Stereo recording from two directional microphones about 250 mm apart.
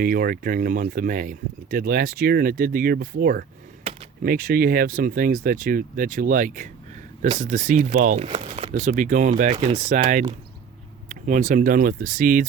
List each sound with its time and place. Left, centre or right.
0.0 s speech: right